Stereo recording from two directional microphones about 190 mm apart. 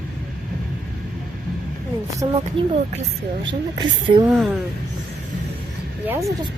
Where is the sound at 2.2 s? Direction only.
20° right (ahead or behind).